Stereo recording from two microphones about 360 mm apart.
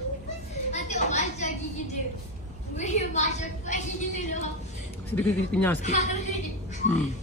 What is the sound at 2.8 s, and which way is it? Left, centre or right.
A woman's voice, centre.